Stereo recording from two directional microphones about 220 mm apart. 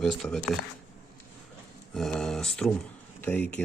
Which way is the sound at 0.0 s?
Centre (ahead or behind).